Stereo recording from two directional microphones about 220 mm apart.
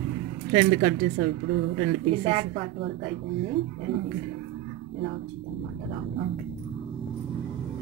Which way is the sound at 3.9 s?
55° right (ahead or behind).